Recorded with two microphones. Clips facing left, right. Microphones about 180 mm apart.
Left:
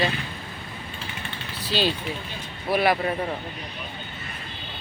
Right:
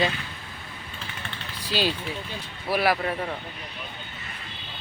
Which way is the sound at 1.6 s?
10° right (ahead or behind).